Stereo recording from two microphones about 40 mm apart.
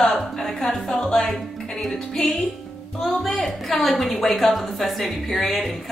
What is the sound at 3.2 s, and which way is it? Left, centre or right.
A woman's voice, centre.